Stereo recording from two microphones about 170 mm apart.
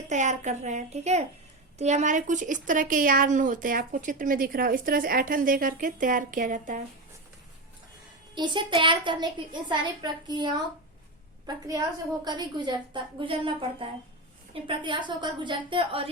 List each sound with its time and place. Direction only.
0.1 s speech: 45° right (ahead or behind)
8.4 s a woman's voice: 25° right (ahead or behind)